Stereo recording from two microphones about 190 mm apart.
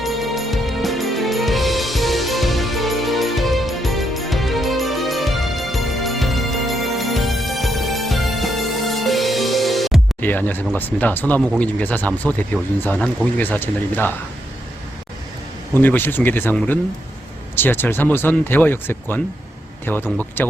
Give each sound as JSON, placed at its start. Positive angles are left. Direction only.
{"t": 0.0, "sound": "music", "side_deg": 0}
{"t": 11.6, "sound": "speech", "side_deg": 10}
{"t": 15.7, "sound": "speech", "side_deg": 10}